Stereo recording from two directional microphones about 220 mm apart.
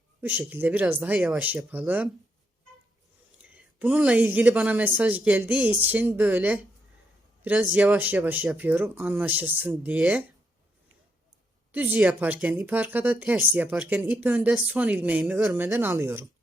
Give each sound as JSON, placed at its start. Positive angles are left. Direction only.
{"t": 0.2, "sound": "speech", "side_deg": -10}
{"t": 3.5, "sound": "speech", "side_deg": -5}
{"t": 11.7, "sound": "speech", "side_deg": -10}